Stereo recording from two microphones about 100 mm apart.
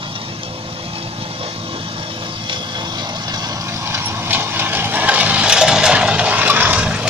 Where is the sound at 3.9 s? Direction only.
20° right (ahead or behind).